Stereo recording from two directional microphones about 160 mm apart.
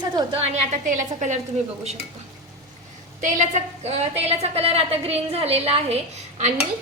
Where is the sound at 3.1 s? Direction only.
55° right (ahead or behind); by 6.0 s 40° right (ahead or behind).